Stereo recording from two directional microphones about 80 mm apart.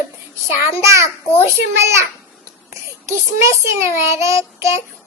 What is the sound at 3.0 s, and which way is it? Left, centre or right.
Child singing, right.